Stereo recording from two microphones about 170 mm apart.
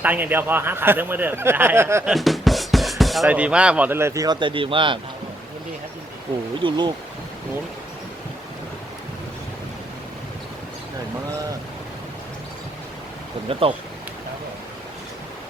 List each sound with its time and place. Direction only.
0.0 s speech: 10° right (ahead or behind)
2.0 s speech: centre (ahead or behind); by 4.9 s 30° right (ahead or behind)
6.6 s speech: 25° right (ahead or behind)
13.5 s speech: 30° right (ahead or behind)